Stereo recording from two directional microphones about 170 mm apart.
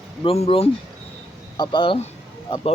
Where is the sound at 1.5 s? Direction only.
25° left (ahead or behind).